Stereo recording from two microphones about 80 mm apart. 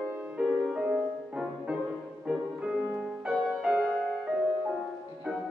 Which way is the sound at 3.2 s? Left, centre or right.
Centre.